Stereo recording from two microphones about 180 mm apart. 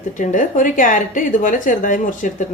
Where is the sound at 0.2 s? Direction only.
45° left (ahead or behind).